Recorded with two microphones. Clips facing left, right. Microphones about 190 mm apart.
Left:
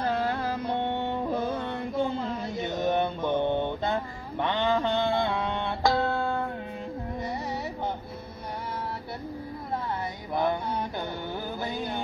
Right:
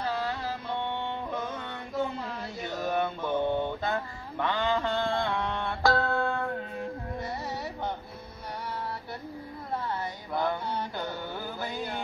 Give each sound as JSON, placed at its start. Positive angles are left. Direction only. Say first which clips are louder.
{"t": 0.0, "sound": "music", "louder": "left 4 dB", "side_deg": 50}
{"t": 10.3, "sound": "mantra", "louder": "left 3 dB", "side_deg": 20}